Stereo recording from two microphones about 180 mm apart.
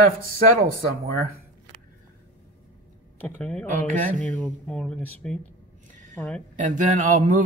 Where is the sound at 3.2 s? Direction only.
10° left (ahead or behind).